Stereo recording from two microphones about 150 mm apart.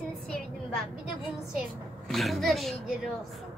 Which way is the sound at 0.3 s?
5° left (ahead or behind).